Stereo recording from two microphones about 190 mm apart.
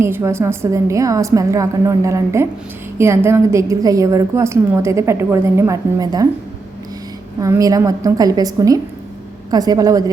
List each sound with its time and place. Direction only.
0.0 s a woman's voice: 15° right (ahead or behind)
7.3 s a woman's voice: 15° right (ahead or behind)